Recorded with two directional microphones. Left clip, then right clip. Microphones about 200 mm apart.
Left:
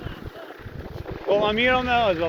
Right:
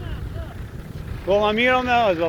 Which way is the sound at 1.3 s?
45° right (ahead or behind).